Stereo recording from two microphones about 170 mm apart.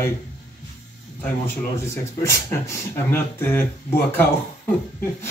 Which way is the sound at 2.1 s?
15° left (ahead or behind).